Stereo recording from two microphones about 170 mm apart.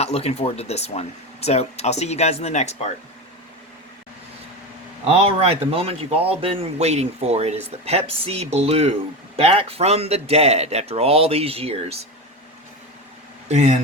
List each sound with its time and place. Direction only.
0.0 s speech: 40° left (ahead or behind)
5.0 s speech: 35° right (ahead or behind)
13.5 s speech: 40° right (ahead or behind)